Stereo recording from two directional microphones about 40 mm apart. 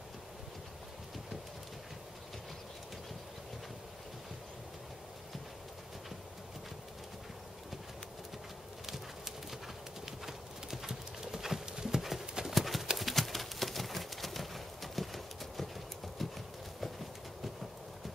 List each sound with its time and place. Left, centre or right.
8.8 s clip-clop: centre
12.5 s horse: centre
12.9 s a sound: centre
16.2 s clip-clop: centre